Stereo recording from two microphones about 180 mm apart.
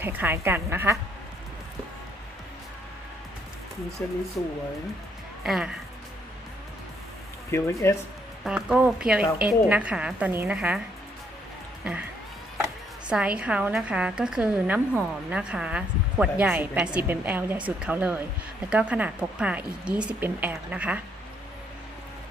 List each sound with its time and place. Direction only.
0.0 s a woman's voice: 10° right (ahead or behind)
4.0 s speech: 10° left (ahead or behind)
5.4 s speech: 5° right (ahead or behind)
7.5 s speech: 15° left (ahead or behind)
8.4 s a woman's voice: 5° right (ahead or behind)
11.9 s speech: 5° right (ahead or behind)
13.1 s a woman's voice: 5° right (ahead or behind)